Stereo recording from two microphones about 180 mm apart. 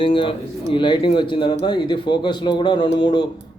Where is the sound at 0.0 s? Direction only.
30° left (ahead or behind).